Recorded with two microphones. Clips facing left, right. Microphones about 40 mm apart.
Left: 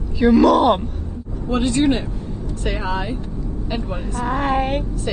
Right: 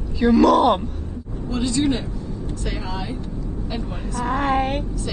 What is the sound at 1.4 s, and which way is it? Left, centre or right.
Speech, left.